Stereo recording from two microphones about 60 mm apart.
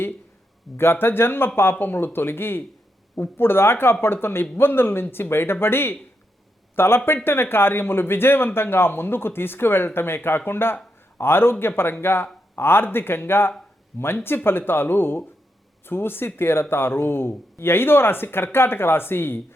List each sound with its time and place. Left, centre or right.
0.8 s speech: left